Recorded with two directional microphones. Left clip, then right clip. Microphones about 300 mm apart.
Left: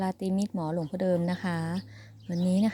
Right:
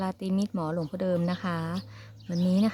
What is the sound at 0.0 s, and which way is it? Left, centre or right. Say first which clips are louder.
Speech: even; centre.